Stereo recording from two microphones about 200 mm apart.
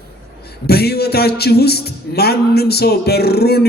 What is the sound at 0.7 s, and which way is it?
A man's voice, 55° left (ahead or behind).